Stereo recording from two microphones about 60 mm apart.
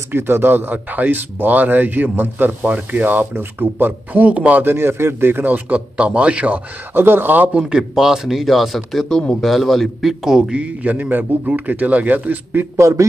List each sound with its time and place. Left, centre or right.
0.1 s a man's voice: right
4.6 s a man's voice: right
6.9 s a man's voice: right
7.5 s a man's voice: centre; by 12.6 s right
12.7 s a man's voice: right